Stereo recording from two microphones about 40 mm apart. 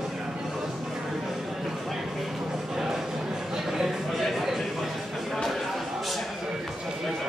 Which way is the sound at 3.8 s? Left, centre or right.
Centre.